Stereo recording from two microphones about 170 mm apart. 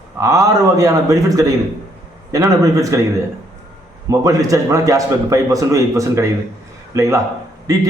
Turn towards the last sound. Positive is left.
turn(degrees=-20)  # may be behind; listen again after turning